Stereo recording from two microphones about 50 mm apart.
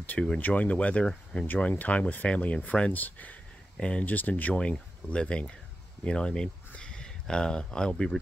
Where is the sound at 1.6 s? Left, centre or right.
Left.